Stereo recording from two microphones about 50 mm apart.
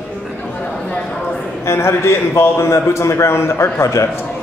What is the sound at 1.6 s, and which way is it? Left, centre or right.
A man's voice, left.